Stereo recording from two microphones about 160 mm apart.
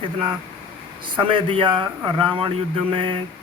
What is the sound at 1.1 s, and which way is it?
A man's voice, 30° right (ahead or behind).